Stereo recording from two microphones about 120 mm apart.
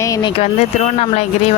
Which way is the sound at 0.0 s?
30° left (ahead or behind).